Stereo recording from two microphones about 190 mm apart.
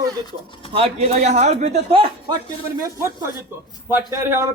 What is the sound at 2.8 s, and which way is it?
Speech, 15° right (ahead or behind).